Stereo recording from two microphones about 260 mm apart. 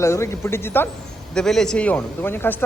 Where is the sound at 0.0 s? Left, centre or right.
Centre.